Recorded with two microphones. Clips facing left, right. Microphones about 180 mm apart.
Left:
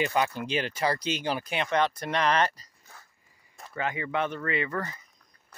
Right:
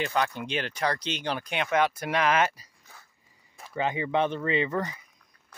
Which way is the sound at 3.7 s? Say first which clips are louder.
Right 3 dB; 20° right (ahead or behind).